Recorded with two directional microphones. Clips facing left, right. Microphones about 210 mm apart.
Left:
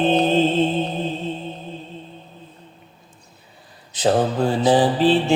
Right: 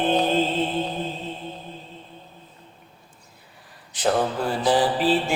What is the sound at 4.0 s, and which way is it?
Mantra, 25° left (ahead or behind).